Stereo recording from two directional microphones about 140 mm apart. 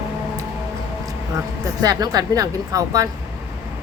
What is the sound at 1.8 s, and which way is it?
A woman's voice, 25° right (ahead or behind).